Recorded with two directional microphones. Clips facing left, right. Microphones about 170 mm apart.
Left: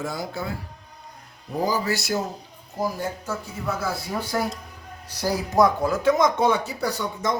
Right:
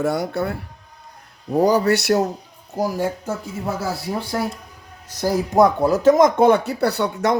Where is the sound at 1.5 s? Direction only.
70° right (ahead or behind).